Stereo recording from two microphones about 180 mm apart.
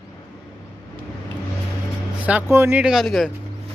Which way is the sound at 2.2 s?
10° right (ahead or behind).